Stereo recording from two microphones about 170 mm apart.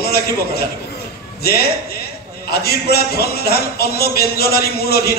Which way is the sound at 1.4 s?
65° left (ahead or behind).